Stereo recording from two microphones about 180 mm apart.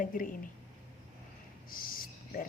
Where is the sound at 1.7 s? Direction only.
50° left (ahead or behind).